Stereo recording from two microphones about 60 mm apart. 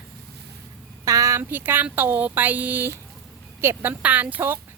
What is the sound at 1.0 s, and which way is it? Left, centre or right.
Speech, right.